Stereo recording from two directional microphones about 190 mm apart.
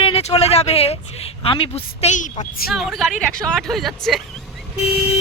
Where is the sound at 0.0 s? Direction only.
30° left (ahead or behind).